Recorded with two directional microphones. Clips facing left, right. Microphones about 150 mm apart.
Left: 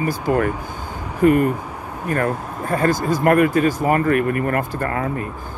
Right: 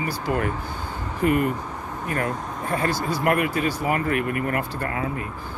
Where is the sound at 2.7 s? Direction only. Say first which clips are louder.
Left 6 dB; 45° left (ahead or behind).